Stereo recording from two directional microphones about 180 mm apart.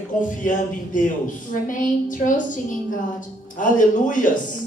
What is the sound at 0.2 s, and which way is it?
A woman's voice, 45° left (ahead or behind).